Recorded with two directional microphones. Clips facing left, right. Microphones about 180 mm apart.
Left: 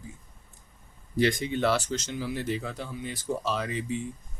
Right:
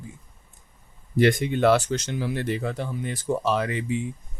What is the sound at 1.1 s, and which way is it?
Speech, 55° right (ahead or behind).